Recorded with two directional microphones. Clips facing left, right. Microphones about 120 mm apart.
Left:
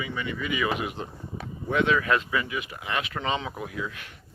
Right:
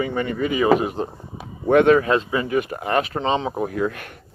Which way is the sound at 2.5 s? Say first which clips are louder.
Right 11 dB; 50° right (ahead or behind).